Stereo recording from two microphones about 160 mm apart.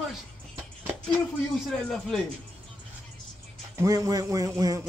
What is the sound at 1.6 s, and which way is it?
Speech, centre (ahead or behind).